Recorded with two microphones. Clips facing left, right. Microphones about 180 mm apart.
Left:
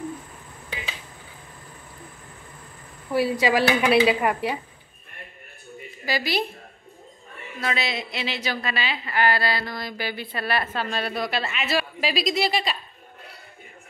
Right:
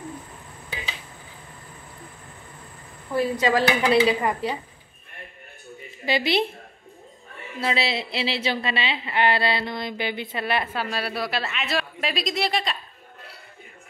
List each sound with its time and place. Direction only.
3.1 s a woman's voice: 10° left (ahead or behind)
6.0 s speech: 25° right (ahead or behind)
7.6 s speech: 30° right (ahead or behind); by 12.7 s 5° left (ahead or behind)